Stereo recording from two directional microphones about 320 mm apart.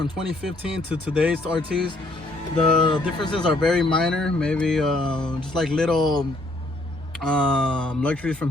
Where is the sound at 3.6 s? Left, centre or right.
Centre.